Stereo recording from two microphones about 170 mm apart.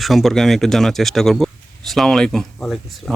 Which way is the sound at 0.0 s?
Centre (ahead or behind).